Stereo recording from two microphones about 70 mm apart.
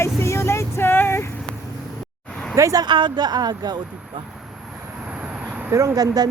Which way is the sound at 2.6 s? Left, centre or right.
Right.